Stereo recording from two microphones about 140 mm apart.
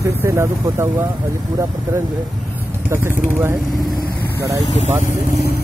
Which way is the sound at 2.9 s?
20° right (ahead or behind).